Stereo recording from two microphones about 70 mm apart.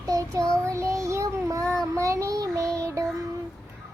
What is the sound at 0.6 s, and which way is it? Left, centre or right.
Child singing, right.